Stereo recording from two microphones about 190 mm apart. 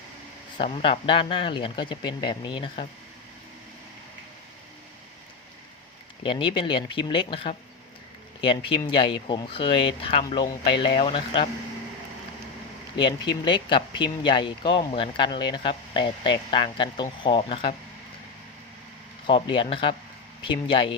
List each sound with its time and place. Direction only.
0.6 s speech: 30° left (ahead or behind)
6.2 s speech: 25° left (ahead or behind)
9.0 s speech: 25° left (ahead or behind)
13.0 s speech: 25° left (ahead or behind)
19.3 s speech: 30° left (ahead or behind)